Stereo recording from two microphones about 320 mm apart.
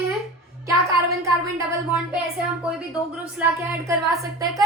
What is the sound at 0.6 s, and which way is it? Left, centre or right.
Music, centre.